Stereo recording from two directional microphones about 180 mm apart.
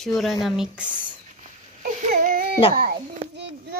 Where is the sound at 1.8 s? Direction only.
55° right (ahead or behind).